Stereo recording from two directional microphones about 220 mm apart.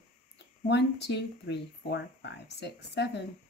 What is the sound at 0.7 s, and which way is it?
Speech, 50° left (ahead or behind).